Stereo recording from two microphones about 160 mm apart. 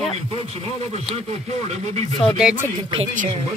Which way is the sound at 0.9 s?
45° right (ahead or behind).